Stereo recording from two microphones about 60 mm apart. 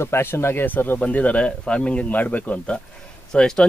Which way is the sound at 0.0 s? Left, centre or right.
Left.